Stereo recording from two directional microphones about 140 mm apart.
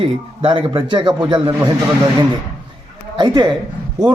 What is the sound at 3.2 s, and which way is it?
Speech, 30° right (ahead or behind).